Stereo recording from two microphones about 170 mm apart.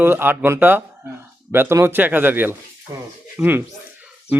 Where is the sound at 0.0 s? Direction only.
15° right (ahead or behind).